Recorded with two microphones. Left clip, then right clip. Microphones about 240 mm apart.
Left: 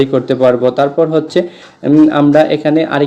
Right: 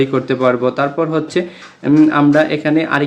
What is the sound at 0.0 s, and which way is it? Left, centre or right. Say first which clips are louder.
Speech: left 4 dB; centre.